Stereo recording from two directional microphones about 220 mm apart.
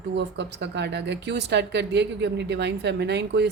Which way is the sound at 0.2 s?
50° right (ahead or behind).